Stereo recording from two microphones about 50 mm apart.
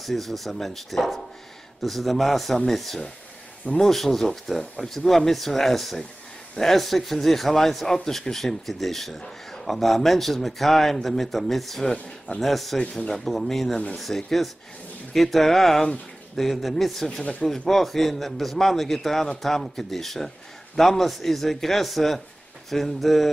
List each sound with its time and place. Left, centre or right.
0.0 s a man's voice: centre
3.6 s speech: centre
3.9 s a man's voice: centre